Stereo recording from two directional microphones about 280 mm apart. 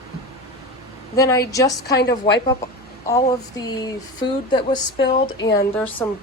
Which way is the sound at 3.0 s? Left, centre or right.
Centre.